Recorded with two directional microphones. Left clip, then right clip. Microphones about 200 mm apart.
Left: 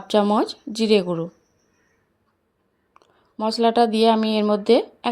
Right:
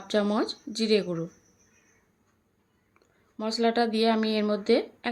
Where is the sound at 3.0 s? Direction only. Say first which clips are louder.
Left 9 dB; 30° left (ahead or behind).